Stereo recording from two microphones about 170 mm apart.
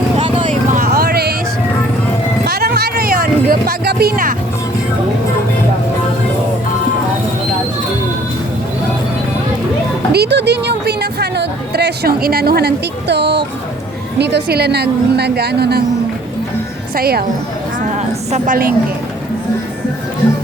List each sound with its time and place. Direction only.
0.7 s vehicle: 60° right (ahead or behind)
2.4 s music: 65° right (ahead or behind)
10.1 s a woman's voice: 75° right (ahead or behind)
16.9 s a woman's voice: 65° right (ahead or behind)
18.3 s a woman's voice: 45° right (ahead or behind)